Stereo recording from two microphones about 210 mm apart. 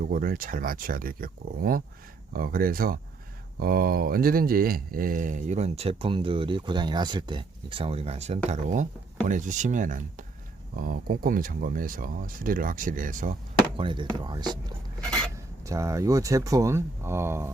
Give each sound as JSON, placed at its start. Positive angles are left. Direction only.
{"t": 0.0, "sound": "speech", "side_deg": -40}
{"t": 13.7, "sound": "speech", "side_deg": -25}